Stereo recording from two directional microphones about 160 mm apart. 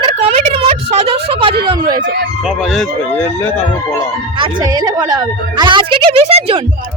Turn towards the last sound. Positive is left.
turn(degrees=-40)  # may be behind; listen again after turning